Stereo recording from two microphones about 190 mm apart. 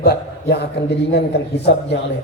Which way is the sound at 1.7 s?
65° left (ahead or behind).